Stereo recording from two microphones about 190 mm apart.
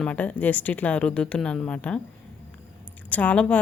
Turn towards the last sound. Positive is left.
turn(degrees=5)  # may be behind; listen again after turning